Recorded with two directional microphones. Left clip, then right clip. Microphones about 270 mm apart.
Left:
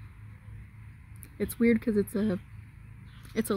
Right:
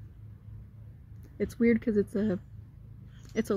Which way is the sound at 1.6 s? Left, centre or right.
Centre.